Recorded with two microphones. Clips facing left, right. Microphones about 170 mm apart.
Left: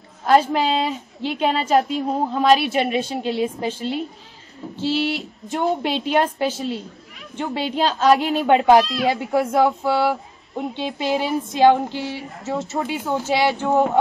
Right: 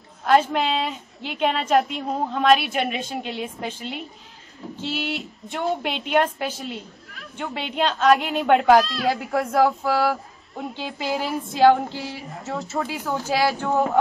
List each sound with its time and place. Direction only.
0.3 s a woman's voice: 35° left (ahead or behind)
2.0 s speech: 5° left (ahead or behind)
2.7 s a woman's voice: 35° left (ahead or behind)
8.8 s speech: centre (ahead or behind)
10.6 s speech: 20° left (ahead or behind)
12.2 s speech: centre (ahead or behind)
12.7 s speech: 20° left (ahead or behind)